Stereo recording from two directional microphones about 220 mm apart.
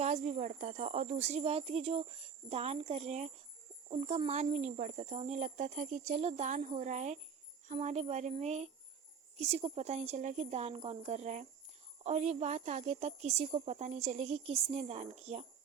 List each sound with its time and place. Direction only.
0.0 s a woman's voice: 30° right (ahead or behind)